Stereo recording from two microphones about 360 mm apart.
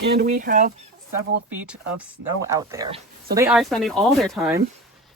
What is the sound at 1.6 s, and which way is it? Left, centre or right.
Speech, centre.